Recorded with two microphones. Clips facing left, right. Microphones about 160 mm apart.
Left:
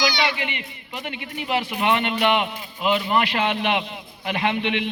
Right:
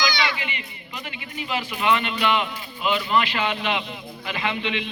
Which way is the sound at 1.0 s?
65° left (ahead or behind).